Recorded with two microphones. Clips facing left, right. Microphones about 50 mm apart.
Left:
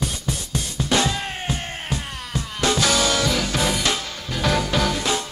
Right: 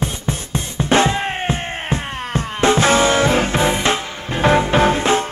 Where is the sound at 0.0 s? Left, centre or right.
Right.